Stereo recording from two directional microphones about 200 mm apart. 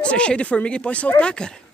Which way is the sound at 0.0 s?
5° left (ahead or behind).